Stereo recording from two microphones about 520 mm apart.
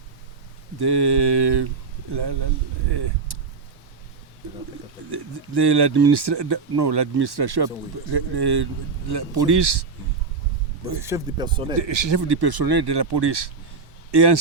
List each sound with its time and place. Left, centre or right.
0.8 s speech: right
2.9 s a sound: right
5.1 s speech: right
11.0 s speech: centre
11.8 s a man's voice: right